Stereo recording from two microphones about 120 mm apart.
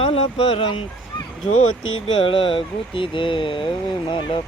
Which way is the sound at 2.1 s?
45° left (ahead or behind).